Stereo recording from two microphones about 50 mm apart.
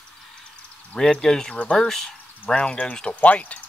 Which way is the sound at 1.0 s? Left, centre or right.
Centre.